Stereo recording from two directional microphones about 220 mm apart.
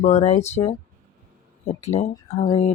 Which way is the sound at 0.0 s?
30° left (ahead or behind).